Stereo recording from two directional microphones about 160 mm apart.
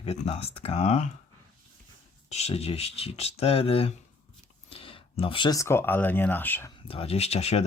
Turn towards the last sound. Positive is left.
turn(degrees=40)  # may be behind; listen again after turning